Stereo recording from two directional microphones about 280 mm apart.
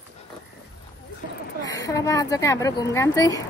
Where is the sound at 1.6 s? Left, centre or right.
Centre.